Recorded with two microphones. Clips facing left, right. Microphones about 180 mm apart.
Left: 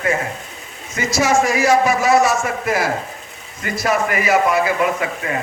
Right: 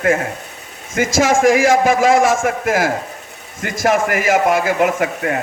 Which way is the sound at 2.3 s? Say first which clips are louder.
Right 3 dB; 50° right (ahead or behind).